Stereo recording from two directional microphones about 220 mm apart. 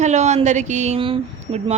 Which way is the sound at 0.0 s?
30° right (ahead or behind).